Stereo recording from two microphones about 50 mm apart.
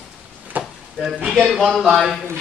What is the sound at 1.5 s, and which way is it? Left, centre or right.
Speech, centre.